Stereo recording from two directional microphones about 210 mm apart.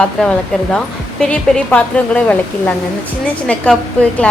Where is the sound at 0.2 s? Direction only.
5° left (ahead or behind).